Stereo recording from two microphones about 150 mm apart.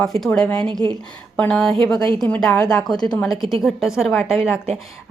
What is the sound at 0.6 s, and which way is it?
Speech, 35° right (ahead or behind).